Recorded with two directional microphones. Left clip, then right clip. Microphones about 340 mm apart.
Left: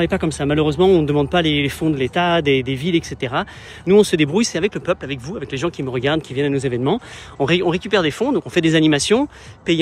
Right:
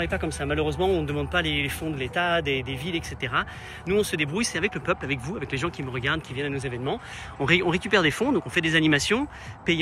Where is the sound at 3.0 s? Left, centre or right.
Centre.